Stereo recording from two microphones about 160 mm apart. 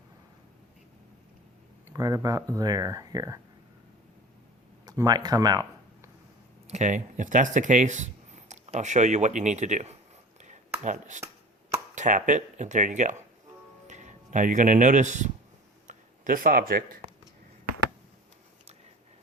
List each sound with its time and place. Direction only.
1.9 s speech: 20° right (ahead or behind)
4.9 s speech: 25° right (ahead or behind)
6.7 s speech: 45° right (ahead or behind)
10.4 s a sound: 50° right (ahead or behind)
11.9 s speech: 50° right (ahead or behind)